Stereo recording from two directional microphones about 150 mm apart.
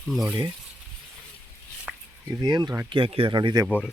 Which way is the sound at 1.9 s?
Centre (ahead or behind).